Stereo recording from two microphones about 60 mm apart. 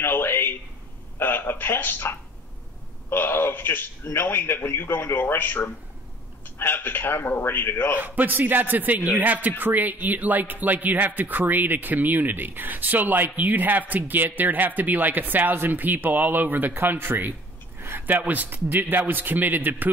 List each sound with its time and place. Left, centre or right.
0.0 s a sound: left
1.1 s a man's voice: left
8.0 s speech: right
18.0 s speech: right